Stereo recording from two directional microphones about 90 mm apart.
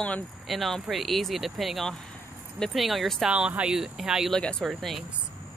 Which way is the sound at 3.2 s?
10° right (ahead or behind).